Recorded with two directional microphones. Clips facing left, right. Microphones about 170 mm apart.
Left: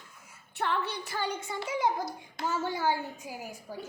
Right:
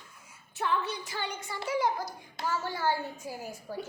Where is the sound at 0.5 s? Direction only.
65° left (ahead or behind).